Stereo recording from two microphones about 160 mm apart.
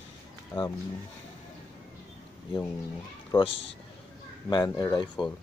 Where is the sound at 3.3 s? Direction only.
25° left (ahead or behind).